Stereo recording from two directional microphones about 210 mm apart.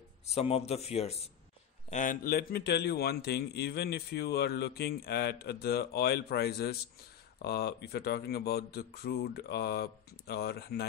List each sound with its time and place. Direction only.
0.3 s speech: 30° left (ahead or behind); by 10.9 s 50° left (ahead or behind)